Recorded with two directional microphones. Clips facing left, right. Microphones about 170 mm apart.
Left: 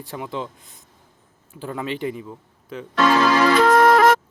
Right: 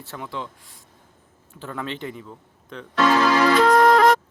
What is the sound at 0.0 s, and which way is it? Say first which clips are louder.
Speech: left 4 dB; 15° left (ahead or behind).